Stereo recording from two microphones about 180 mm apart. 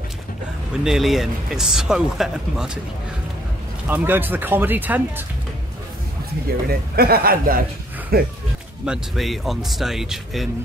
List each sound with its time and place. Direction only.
0.8 s speech: centre (ahead or behind)
3.8 s speech: 10° right (ahead or behind)
6.7 s a man's voice: 55° right (ahead or behind)
8.8 s speech: centre (ahead or behind)